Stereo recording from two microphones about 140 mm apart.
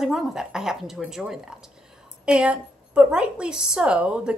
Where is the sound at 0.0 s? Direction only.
5° right (ahead or behind).